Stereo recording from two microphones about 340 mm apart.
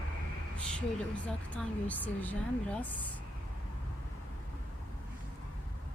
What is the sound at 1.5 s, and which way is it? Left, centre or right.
A woman's voice, centre.